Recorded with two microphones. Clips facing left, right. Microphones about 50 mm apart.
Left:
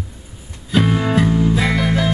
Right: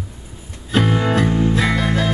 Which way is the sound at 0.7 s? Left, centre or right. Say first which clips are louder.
Left 1 dB; centre.